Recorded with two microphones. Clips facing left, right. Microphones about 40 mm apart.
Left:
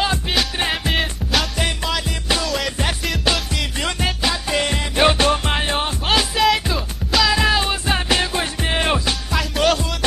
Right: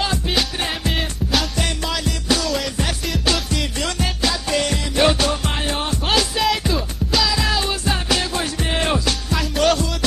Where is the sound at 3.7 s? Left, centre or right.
Left.